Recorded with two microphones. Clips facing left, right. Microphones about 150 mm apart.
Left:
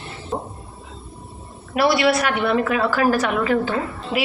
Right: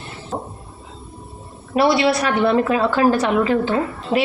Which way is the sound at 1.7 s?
25° right (ahead or behind).